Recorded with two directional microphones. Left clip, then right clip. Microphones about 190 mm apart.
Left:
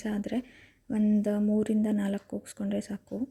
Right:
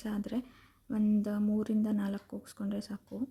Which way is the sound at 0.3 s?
15° left (ahead or behind).